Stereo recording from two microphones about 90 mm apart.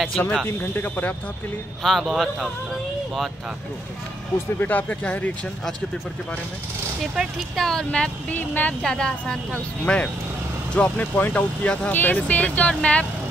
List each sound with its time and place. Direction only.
0.2 s speech: 10° left (ahead or behind)
0.5 s speech: 20° left (ahead or behind)
1.8 s speech: 5° left (ahead or behind)
4.6 s speech: 20° left (ahead or behind)
7.2 s speech: centre (ahead or behind); by 8.7 s 20° left (ahead or behind)
8.8 s speech: 5° left (ahead or behind)